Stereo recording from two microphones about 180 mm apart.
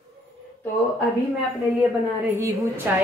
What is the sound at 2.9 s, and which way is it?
Speech, 10° right (ahead or behind).